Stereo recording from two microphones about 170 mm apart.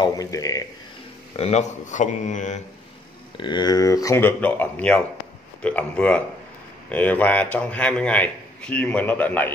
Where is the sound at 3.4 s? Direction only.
25° left (ahead or behind).